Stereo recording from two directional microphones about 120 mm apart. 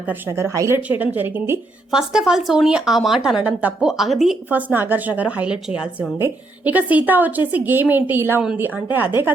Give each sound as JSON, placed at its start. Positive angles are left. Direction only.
{"t": 0.0, "sound": "speech", "side_deg": -20}
{"t": 0.8, "sound": "a woman's voice", "side_deg": -15}
{"t": 1.9, "sound": "a woman's voice", "side_deg": -5}
{"t": 4.4, "sound": "a woman's voice", "side_deg": -15}